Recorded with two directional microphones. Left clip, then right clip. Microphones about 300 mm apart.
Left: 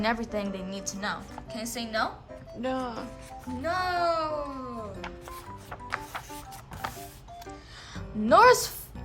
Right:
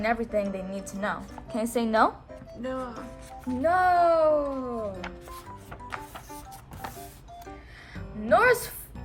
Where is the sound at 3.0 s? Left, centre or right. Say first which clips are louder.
Right 1 dB; centre.